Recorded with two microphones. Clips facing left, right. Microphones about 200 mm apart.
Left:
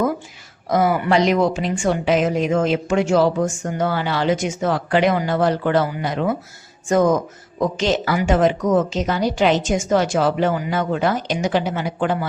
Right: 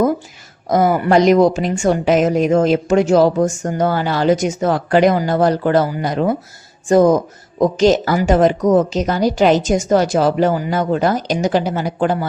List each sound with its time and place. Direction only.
0.7 s a woman's voice: 45° right (ahead or behind)